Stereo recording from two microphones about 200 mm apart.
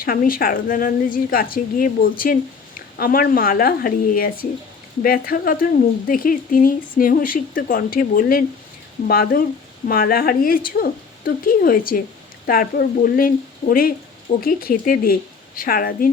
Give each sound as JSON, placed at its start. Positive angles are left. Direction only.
{"t": 0.0, "sound": "speech", "side_deg": 45}